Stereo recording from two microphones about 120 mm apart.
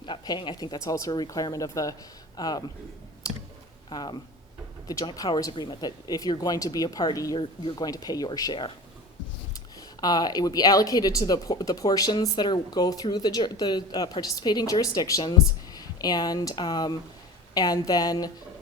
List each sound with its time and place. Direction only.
0.0 s speech: 40° left (ahead or behind)
3.2 s clicking: 30° left (ahead or behind)
3.8 s speech: 35° left (ahead or behind)
7.3 s speech: 45° left (ahead or behind)
7.9 s speech: 30° left (ahead or behind)
10.0 s speech: 35° left (ahead or behind)